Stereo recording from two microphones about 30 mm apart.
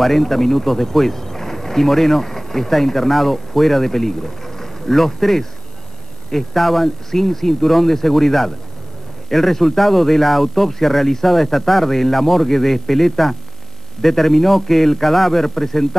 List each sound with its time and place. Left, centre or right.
0.0 s speech: centre